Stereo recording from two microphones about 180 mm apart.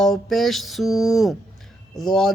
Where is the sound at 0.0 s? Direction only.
Centre (ahead or behind).